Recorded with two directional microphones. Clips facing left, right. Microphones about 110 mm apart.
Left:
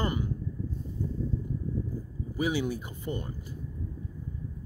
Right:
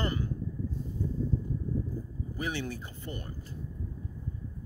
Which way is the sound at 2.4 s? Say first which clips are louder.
Left 6 dB; 10° left (ahead or behind).